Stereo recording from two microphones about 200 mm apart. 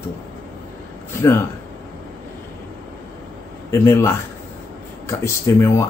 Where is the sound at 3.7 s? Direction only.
15° left (ahead or behind).